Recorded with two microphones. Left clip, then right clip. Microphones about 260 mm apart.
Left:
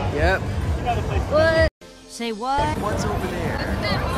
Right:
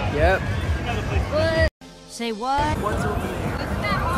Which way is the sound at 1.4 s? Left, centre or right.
Centre.